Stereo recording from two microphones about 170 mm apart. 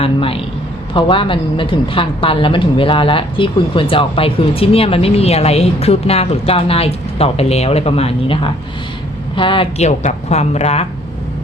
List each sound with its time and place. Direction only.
0.0 s a woman's voice: 35° left (ahead or behind)